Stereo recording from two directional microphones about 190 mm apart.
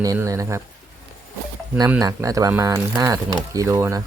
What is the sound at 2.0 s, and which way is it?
Speech, 20° right (ahead or behind).